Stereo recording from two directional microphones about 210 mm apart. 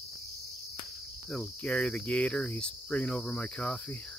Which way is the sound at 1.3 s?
5° left (ahead or behind).